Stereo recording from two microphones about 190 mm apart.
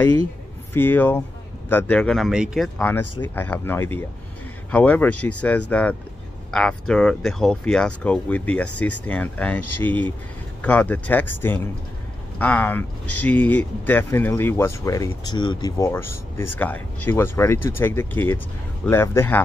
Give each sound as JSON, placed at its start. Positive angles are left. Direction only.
{"t": 0.7, "sound": "speech", "side_deg": 10}
{"t": 2.8, "sound": "speech", "side_deg": 10}